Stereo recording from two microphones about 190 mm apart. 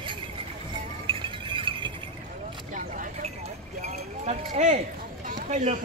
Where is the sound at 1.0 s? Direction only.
25° right (ahead or behind).